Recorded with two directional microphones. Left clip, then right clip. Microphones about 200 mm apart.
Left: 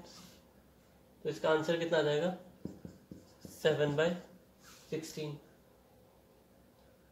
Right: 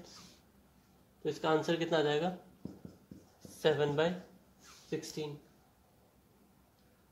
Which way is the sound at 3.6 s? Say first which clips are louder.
Even; 45° right (ahead or behind).